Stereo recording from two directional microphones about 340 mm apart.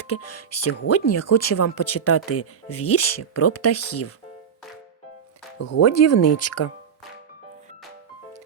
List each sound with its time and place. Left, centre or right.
0.1 s speech: left
5.5 s speech: left